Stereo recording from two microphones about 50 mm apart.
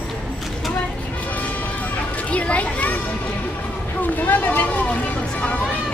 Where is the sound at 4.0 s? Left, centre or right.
Left.